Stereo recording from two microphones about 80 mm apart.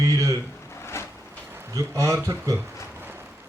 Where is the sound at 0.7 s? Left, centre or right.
Left.